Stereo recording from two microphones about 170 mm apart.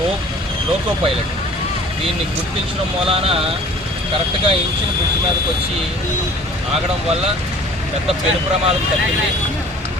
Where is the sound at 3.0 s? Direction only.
35° right (ahead or behind).